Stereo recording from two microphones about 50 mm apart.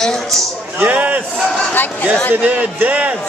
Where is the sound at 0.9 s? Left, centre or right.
Right.